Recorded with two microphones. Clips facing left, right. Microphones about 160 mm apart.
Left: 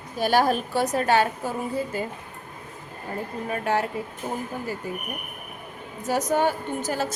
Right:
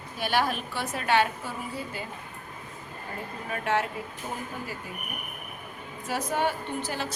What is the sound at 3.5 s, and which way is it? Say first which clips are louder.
Speech: left 2 dB; 35° left (ahead or behind).